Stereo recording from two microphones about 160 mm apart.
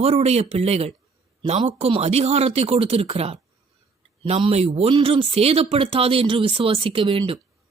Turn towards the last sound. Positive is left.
turn(degrees=-35)  # may be behind; listen again after turning